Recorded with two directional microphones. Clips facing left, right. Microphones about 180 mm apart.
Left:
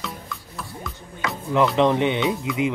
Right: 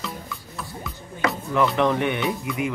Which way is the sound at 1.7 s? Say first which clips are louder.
Left 3 dB; 20° left (ahead or behind).